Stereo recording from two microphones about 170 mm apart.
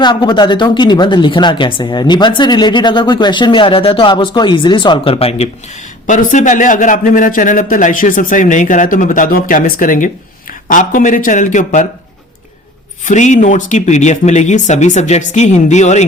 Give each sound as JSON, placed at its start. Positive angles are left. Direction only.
{"t": 0.0, "sound": "a woman's voice", "side_deg": 30}
{"t": 6.1, "sound": "a man's voice", "side_deg": 50}
{"t": 13.1, "sound": "a man's voice", "side_deg": 45}